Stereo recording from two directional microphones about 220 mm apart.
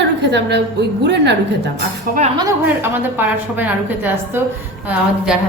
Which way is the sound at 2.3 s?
10° right (ahead or behind).